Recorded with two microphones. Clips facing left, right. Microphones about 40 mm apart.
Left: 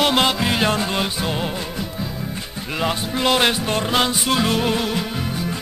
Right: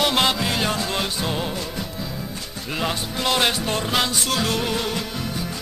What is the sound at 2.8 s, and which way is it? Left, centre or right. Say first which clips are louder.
Music: left 4 dB; centre.